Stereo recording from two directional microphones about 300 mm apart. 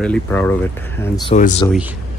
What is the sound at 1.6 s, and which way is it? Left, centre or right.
Speech, centre.